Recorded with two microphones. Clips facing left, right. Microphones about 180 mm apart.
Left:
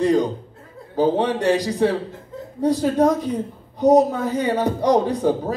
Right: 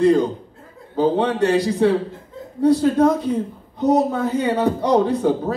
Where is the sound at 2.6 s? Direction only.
15° left (ahead or behind).